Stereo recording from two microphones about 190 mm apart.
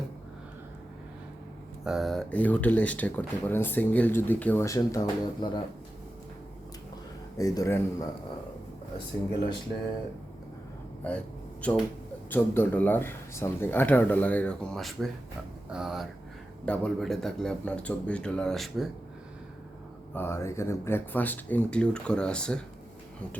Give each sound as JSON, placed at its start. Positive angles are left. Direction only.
{"t": 1.8, "sound": "speech", "side_deg": 0}
{"t": 7.3, "sound": "speech", "side_deg": 15}
{"t": 11.6, "sound": "speech", "side_deg": 5}
{"t": 20.1, "sound": "speech", "side_deg": 15}